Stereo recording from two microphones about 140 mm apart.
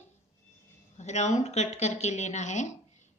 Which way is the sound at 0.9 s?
55° left (ahead or behind).